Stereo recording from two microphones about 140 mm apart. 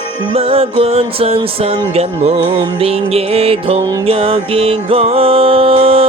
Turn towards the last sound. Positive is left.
turn(degrees=-40)  # may be behind; listen again after turning